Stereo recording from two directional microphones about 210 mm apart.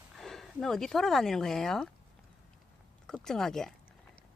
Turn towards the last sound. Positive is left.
turn(degrees=0)  # may be behind; listen again after turning